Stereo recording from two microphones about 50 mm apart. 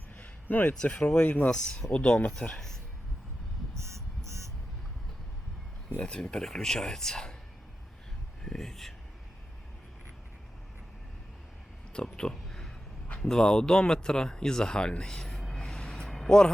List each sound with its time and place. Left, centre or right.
0.4 s speech: left
1.5 s speech: centre
1.9 s speech: left
3.8 s a sound: right
6.0 s speech: centre
8.4 s speech: centre
12.1 s a sound: centre
13.1 s speech: centre
16.1 s vehicle: centre